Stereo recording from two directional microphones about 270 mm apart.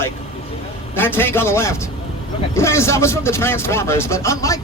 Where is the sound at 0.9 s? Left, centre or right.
Centre.